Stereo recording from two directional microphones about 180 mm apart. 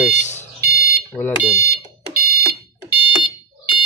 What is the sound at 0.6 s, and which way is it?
Smoke detector, 60° right (ahead or behind).